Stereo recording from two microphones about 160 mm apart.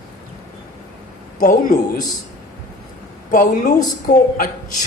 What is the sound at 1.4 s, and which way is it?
Speech, 55° left (ahead or behind).